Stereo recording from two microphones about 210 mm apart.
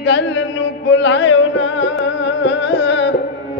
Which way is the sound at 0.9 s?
60° left (ahead or behind).